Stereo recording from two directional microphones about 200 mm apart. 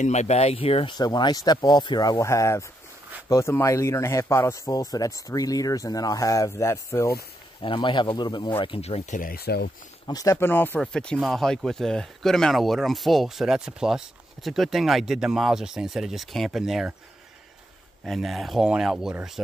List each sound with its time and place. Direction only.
0.0 s speech: 35° left (ahead or behind); by 9.7 s 50° left (ahead or behind)
10.0 s speech: 15° left (ahead or behind); by 16.9 s centre (ahead or behind)
18.0 s speech: centre (ahead or behind)